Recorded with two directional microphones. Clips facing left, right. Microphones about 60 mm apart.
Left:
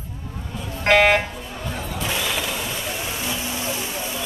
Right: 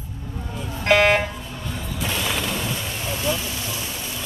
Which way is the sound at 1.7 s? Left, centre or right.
Left.